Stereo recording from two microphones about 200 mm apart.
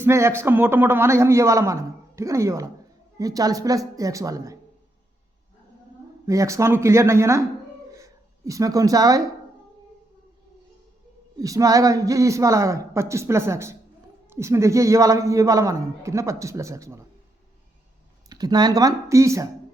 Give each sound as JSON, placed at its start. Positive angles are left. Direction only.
{"t": 0.0, "sound": "a man's voice", "side_deg": -15}
{"t": 6.2, "sound": "a man's voice", "side_deg": -15}
{"t": 11.3, "sound": "a man's voice", "side_deg": -15}
{"t": 18.3, "sound": "speech", "side_deg": -20}